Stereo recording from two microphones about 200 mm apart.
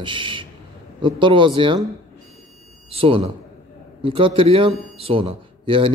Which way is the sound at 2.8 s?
30° right (ahead or behind).